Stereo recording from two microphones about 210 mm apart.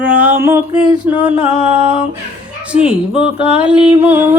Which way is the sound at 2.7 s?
5° right (ahead or behind).